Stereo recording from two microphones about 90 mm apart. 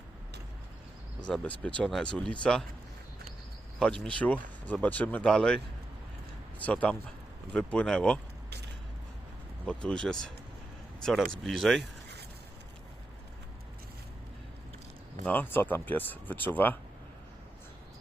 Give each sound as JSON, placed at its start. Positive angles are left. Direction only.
{"t": 1.3, "sound": "speech", "side_deg": 15}
{"t": 3.8, "sound": "speech", "side_deg": 10}
{"t": 6.6, "sound": "speech", "side_deg": 15}
{"t": 9.6, "sound": "speech", "side_deg": 10}
{"t": 15.3, "sound": "speech", "side_deg": 20}